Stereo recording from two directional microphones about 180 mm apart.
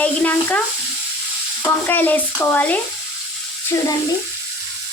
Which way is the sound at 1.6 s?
10° left (ahead or behind).